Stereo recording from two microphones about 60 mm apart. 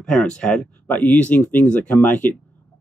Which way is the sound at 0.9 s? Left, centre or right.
Left.